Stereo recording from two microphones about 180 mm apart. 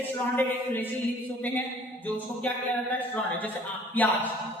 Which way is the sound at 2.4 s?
10° left (ahead or behind).